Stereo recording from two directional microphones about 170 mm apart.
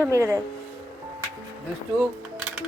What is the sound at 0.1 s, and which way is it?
Speech, 15° right (ahead or behind).